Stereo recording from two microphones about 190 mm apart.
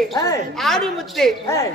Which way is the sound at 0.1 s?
20° left (ahead or behind).